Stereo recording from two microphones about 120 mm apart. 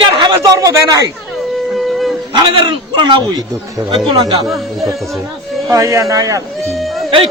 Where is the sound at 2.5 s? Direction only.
45° right (ahead or behind).